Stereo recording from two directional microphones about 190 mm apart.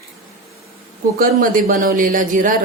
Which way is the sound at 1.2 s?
45° right (ahead or behind).